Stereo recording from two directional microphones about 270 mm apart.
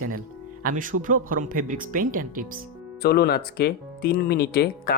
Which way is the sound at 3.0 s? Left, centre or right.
Left.